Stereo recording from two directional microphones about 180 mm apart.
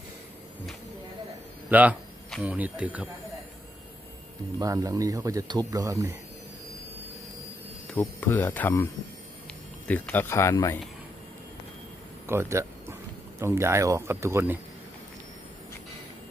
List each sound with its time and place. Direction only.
1.7 s speech: 10° right (ahead or behind)
4.6 s speech: 20° right (ahead or behind)
7.9 s speech: 10° left (ahead or behind)
12.3 s speech: 15° right (ahead or behind)